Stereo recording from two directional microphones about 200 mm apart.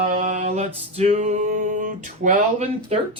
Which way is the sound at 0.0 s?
35° right (ahead or behind).